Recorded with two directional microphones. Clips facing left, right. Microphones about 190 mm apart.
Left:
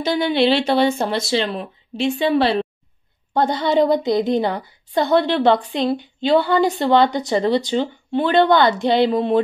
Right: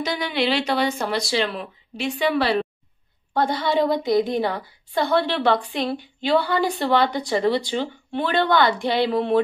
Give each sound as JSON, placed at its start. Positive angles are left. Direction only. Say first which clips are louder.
{"t": 0.0, "sound": "a woman's voice", "louder": "left 6 dB", "side_deg": 25}